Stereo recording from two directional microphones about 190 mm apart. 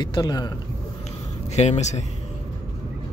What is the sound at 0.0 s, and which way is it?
Speech, 20° left (ahead or behind).